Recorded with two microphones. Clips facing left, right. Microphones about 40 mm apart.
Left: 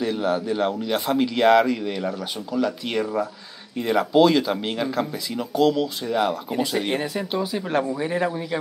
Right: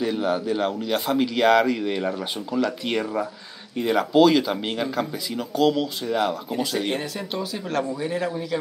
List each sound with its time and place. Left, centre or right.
0.0 s a man's voice: centre
0.5 s speech: centre
1.8 s speech: centre